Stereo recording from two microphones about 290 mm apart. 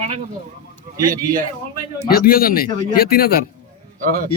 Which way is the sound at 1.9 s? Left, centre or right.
Left.